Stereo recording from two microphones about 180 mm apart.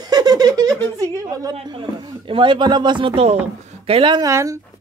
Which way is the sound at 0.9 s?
20° right (ahead or behind).